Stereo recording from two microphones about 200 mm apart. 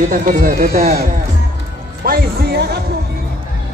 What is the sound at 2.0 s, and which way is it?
Music, 50° right (ahead or behind).